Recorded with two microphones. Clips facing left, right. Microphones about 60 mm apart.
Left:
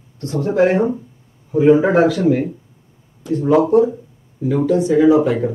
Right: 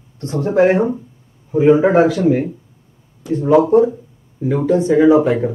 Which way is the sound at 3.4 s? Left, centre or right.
Right.